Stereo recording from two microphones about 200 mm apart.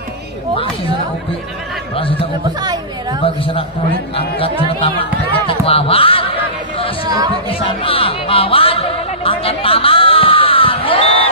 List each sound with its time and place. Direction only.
2.6 s chatter: 20° right (ahead or behind)
4.4 s speech: 25° left (ahead or behind)
7.1 s speech: 20° right (ahead or behind)
7.4 s speech: 25° left (ahead or behind)